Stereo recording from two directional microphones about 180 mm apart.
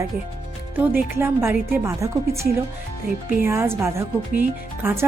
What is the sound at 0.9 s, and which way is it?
A woman's voice, 15° right (ahead or behind).